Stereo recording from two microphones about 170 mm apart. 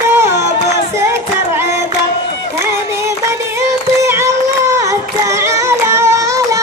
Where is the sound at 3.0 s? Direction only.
15° right (ahead or behind).